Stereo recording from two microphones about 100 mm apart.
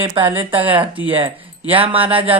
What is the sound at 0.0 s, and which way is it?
Speech, 60° right (ahead or behind).